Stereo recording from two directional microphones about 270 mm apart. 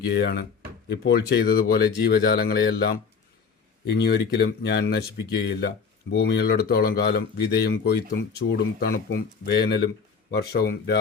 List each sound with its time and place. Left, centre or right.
0.0 s speech: left